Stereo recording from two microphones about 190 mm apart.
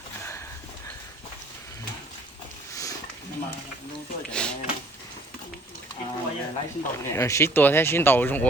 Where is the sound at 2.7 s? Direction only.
15° left (ahead or behind).